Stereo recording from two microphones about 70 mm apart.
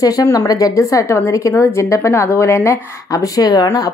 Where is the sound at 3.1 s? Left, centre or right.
Left.